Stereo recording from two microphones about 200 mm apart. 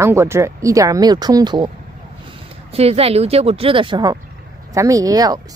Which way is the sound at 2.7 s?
30° right (ahead or behind).